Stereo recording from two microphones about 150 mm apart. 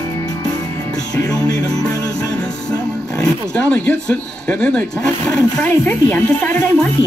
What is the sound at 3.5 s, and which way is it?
Speech, 5° left (ahead or behind).